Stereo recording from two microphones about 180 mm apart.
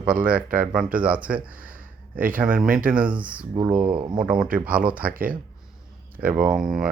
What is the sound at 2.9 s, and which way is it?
Speech, 5° right (ahead or behind).